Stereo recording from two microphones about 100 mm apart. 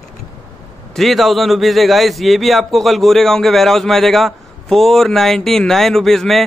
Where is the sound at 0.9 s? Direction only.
Centre (ahead or behind).